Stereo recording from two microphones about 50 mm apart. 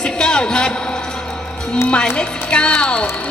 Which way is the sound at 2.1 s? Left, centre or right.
Centre.